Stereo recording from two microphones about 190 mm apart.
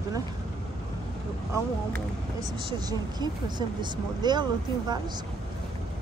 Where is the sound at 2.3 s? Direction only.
20° right (ahead or behind).